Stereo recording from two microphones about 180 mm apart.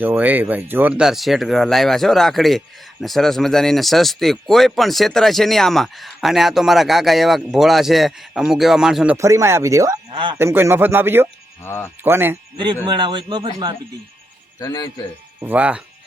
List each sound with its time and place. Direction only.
0.0 s speech: 10° right (ahead or behind)
9.1 s speech: 15° right (ahead or behind)
10.1 s speech: 30° right (ahead or behind)
10.3 s speech: 15° right (ahead or behind)
11.6 s speech: 15° left (ahead or behind)
12.0 s speech: 10° right (ahead or behind)
12.8 s speech: 25° right (ahead or behind)
14.6 s a man's voice: 20° left (ahead or behind)
15.4 s speech: 10° right (ahead or behind)